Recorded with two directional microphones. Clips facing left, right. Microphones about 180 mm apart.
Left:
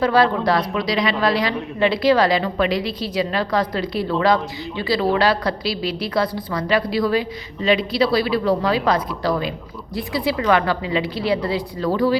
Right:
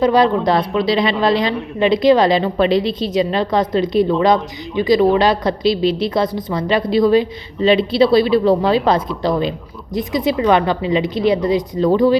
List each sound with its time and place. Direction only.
0.0 s a woman's voice: 20° right (ahead or behind)